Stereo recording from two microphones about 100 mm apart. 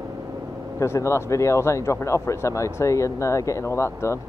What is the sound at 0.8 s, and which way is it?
Speech, 30° left (ahead or behind).